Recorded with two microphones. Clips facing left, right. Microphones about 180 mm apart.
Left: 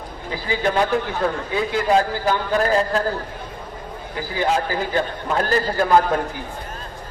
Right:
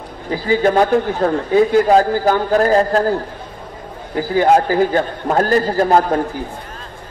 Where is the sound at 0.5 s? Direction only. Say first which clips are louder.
Right 7 dB; 45° right (ahead or behind).